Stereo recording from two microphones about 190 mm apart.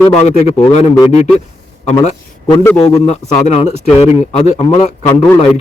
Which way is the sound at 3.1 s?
35° left (ahead or behind).